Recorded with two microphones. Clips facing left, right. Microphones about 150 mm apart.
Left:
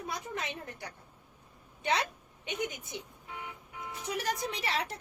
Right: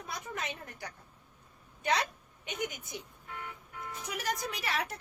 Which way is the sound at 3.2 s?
15° left (ahead or behind).